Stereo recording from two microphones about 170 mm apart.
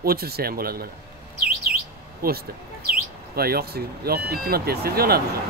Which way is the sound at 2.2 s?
60° right (ahead or behind).